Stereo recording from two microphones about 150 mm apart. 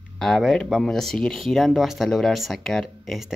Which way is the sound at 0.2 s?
5° left (ahead or behind).